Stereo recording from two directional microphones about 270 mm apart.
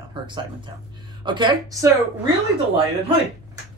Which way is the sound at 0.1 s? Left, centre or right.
Centre.